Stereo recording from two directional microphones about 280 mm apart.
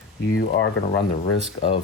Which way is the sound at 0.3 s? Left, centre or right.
Left.